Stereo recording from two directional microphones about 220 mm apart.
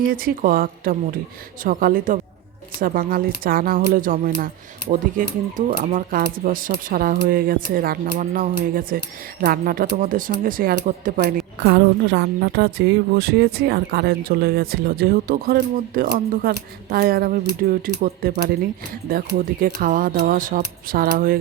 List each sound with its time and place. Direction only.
0.1 s a woman's voice: 40° right (ahead or behind)
19.6 s speech: 40° right (ahead or behind)